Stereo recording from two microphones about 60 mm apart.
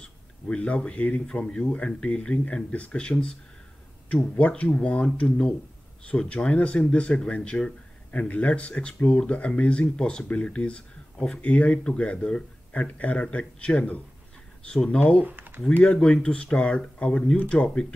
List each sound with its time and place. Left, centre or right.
0.0 s speech: centre
15.2 s a sound: right
15.8 s speech: centre